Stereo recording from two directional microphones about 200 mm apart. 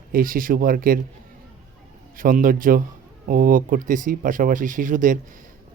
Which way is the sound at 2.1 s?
45° right (ahead or behind).